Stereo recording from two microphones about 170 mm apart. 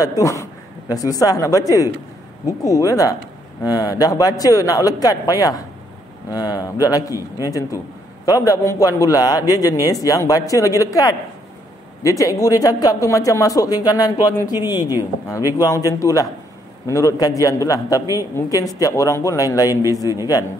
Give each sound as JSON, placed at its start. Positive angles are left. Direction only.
{"t": 0.0, "sound": "a man's voice", "side_deg": 20}
{"t": 7.2, "sound": "a man's voice", "side_deg": -15}
{"t": 8.3, "sound": "a man's voice", "side_deg": 20}